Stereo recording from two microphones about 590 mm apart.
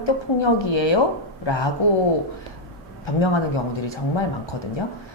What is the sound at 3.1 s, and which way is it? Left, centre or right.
Speech, left.